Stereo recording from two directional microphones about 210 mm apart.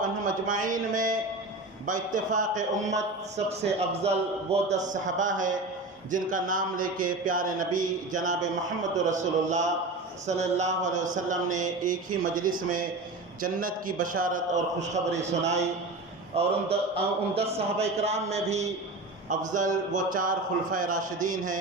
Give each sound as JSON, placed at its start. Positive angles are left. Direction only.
{"t": 0.0, "sound": "a man's voice", "side_deg": -40}